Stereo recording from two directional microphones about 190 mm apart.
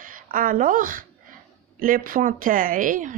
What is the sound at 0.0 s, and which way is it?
A woman's voice, 45° right (ahead or behind).